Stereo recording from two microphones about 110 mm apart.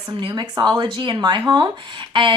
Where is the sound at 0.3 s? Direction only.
35° right (ahead or behind).